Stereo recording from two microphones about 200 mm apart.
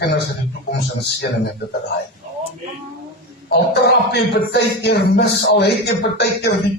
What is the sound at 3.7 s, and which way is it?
Speech, 55° left (ahead or behind).